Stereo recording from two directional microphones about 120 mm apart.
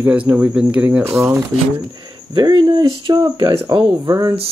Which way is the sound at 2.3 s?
40° right (ahead or behind).